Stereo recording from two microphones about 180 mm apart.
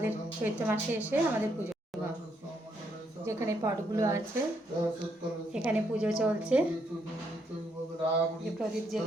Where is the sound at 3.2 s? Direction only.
15° right (ahead or behind).